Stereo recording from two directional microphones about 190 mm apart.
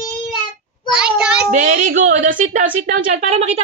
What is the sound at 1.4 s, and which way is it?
A woman's voice, 45° right (ahead or behind).